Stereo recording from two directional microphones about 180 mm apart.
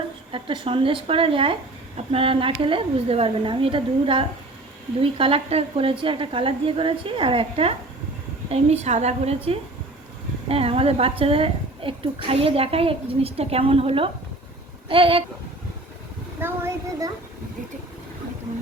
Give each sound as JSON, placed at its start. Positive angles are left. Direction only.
{"t": 0.3, "sound": "a woman's voice", "side_deg": -30}
{"t": 16.4, "sound": "speech", "side_deg": -15}